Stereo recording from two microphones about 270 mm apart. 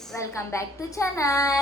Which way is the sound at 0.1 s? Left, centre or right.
Centre.